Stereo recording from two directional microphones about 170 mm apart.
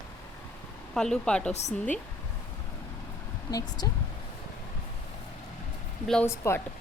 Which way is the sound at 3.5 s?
25° left (ahead or behind).